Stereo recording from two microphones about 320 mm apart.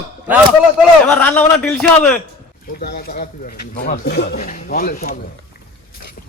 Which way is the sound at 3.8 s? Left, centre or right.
Left.